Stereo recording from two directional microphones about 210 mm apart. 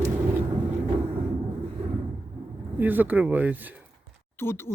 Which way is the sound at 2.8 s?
10° right (ahead or behind).